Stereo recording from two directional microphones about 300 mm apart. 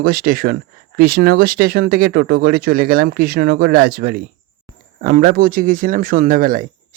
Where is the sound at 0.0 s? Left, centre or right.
Right.